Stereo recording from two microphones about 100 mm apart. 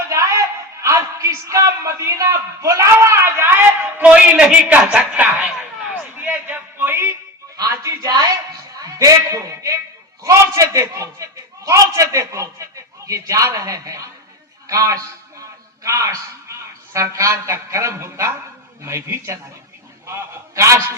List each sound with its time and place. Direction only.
0.1 s a man's voice: 30° right (ahead or behind); by 5.5 s 15° right (ahead or behind)
5.9 s a sound: 20° right (ahead or behind)
7.5 s music: 35° right (ahead or behind)
8.0 s a man's voice: 45° right (ahead or behind)